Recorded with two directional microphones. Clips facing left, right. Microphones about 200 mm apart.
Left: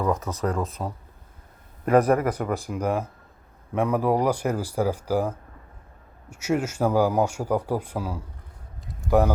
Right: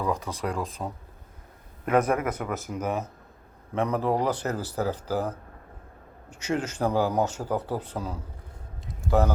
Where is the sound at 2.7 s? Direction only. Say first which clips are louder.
Left 2 dB; 10° left (ahead or behind).